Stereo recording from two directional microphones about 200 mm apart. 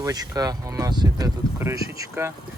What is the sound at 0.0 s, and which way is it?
Speech, 20° right (ahead or behind).